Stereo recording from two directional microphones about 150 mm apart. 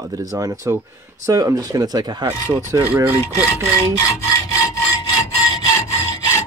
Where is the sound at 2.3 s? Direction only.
15° right (ahead or behind).